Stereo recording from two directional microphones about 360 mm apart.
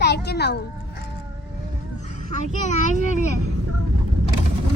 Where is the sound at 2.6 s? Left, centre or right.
Centre.